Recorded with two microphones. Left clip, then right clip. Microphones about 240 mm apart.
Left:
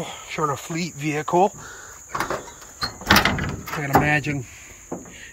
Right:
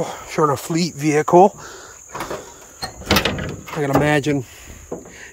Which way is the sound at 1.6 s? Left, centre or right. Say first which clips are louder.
Right 2 dB; right.